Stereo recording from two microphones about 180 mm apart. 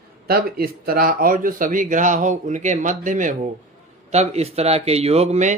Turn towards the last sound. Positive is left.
turn(degrees=-40)  # may be behind; listen again after turning